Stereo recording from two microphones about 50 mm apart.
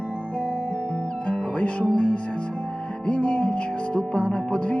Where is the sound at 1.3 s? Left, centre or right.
Left.